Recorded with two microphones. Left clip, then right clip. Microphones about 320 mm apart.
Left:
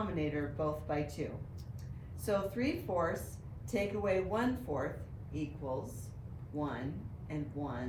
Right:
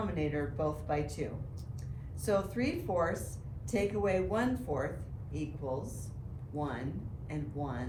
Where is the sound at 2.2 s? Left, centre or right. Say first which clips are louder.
Right 2 dB; centre.